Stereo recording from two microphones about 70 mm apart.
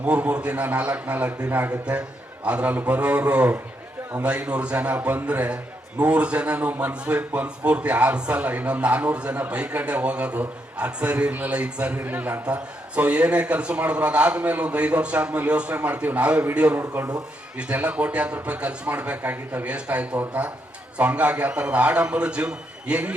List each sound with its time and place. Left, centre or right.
0.0 s a man's voice: centre